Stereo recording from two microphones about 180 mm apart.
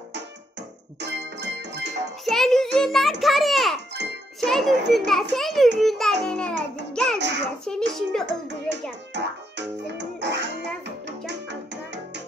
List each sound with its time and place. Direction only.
0.1 s music: 70° right (ahead or behind)
2.2 s a sound: centre (ahead or behind)
4.0 s jingle: 75° right (ahead or behind)
4.4 s a child's voice: centre (ahead or behind)
6.9 s music: 5° left (ahead or behind)
7.2 s a child's voice: 75° right (ahead or behind)
7.6 s a child's voice: 5° left (ahead or behind)
9.1 s music: 75° right (ahead or behind)